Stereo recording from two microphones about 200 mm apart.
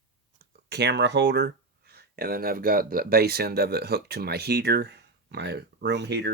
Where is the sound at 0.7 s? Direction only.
55° right (ahead or behind).